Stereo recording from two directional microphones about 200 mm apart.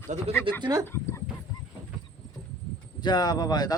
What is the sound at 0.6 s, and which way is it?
Speech, 20° right (ahead or behind).